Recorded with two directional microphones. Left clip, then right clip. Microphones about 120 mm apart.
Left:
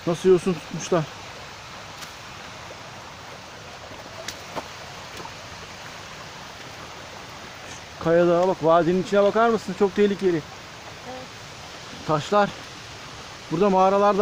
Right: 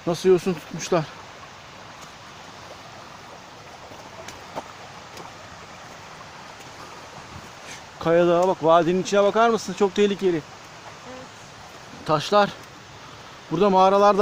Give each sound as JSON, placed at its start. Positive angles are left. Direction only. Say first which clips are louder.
{"t": 0.1, "sound": "speech", "louder": "even", "side_deg": -5}
{"t": 8.0, "sound": "speech", "louder": "even", "side_deg": -20}
{"t": 12.0, "sound": "speech", "louder": "right 2 dB", "side_deg": -20}
{"t": 13.6, "sound": "speech", "louder": "right 2 dB", "side_deg": -40}